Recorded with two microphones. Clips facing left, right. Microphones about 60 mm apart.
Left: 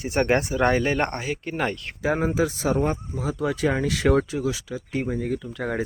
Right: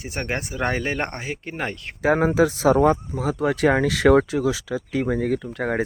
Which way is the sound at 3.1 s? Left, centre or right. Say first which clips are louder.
Right 3 dB; right.